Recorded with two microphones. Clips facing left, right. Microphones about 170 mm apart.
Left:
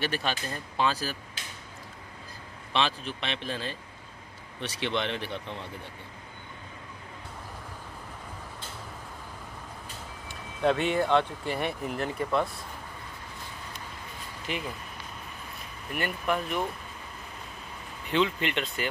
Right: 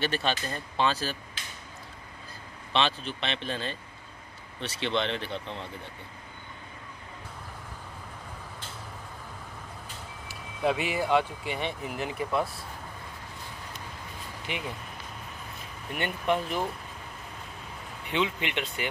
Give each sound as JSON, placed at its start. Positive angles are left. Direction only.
{"t": 0.0, "sound": "speech", "side_deg": 10}
{"t": 2.7, "sound": "speech", "side_deg": 10}
{"t": 10.6, "sound": "speech", "side_deg": -5}
{"t": 14.5, "sound": "speech", "side_deg": -15}
{"t": 16.0, "sound": "speech", "side_deg": -25}
{"t": 18.1, "sound": "speech", "side_deg": -15}